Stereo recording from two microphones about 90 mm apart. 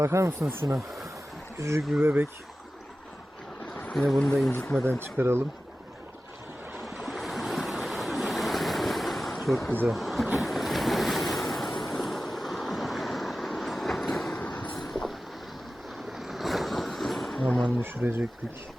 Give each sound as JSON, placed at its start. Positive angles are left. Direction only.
{"t": 0.0, "sound": "speech", "side_deg": -30}
{"t": 3.9, "sound": "speech", "side_deg": 0}
{"t": 4.9, "sound": "speech", "side_deg": -25}
{"t": 6.9, "sound": "waves", "side_deg": 0}
{"t": 9.8, "sound": "speech", "side_deg": 0}
{"t": 10.4, "sound": "waves", "side_deg": 0}
{"t": 11.9, "sound": "vehicle", "side_deg": 0}
{"t": 17.4, "sound": "speech", "side_deg": 15}
{"t": 17.7, "sound": "speech", "side_deg": -25}